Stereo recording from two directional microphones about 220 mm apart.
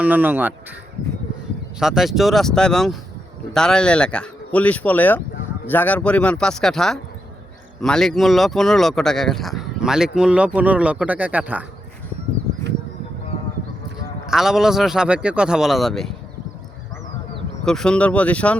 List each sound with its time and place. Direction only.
0.0 s speech: 10° right (ahead or behind)
1.8 s speech: centre (ahead or behind)
14.3 s speech: centre (ahead or behind)
17.7 s speech: 5° left (ahead or behind)